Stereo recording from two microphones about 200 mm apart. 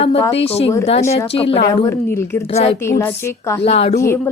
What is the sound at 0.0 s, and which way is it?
A woman's voice, 30° left (ahead or behind).